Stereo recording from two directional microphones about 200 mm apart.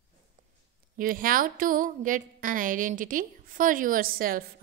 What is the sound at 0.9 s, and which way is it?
A woman's voice, 45° right (ahead or behind).